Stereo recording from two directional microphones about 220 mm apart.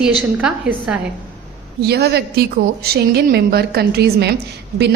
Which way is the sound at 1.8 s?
45° right (ahead or behind).